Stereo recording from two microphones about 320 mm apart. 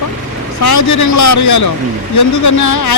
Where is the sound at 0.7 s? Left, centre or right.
Left.